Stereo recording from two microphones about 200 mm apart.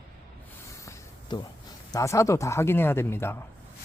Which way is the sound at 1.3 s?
25° left (ahead or behind).